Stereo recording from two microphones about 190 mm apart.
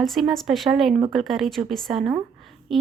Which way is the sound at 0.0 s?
Centre (ahead or behind).